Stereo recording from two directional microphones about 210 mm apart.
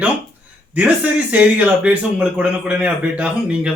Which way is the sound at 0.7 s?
5° right (ahead or behind).